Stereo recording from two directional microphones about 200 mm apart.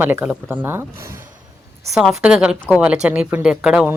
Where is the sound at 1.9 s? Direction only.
5° right (ahead or behind).